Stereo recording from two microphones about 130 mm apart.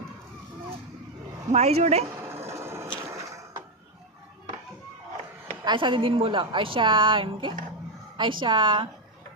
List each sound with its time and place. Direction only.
1.5 s a woman's voice: 55° right (ahead or behind)
2.5 s printer: 20° right (ahead or behind)
5.6 s a woman's voice: 40° right (ahead or behind)